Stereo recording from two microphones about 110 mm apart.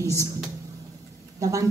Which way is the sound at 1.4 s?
30° right (ahead or behind).